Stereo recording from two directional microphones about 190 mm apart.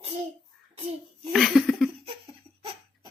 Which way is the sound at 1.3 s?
Centre (ahead or behind).